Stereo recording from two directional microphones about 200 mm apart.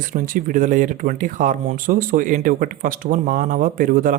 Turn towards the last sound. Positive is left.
turn(degrees=-45)  # may be behind; listen again after turning